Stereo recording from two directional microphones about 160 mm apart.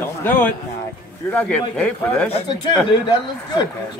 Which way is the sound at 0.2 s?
10° left (ahead or behind).